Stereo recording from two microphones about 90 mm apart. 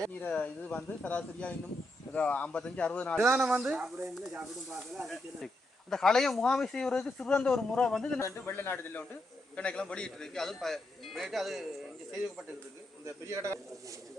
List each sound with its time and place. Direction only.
0.2 s speech: 15° left (ahead or behind)
3.3 s a man's voice: 5° right (ahead or behind); by 8.2 s 10° left (ahead or behind)
8.2 s a man's voice: 25° left (ahead or behind)
9.6 s a man's voice: 10° left (ahead or behind)
13.1 s speech: 30° right (ahead or behind)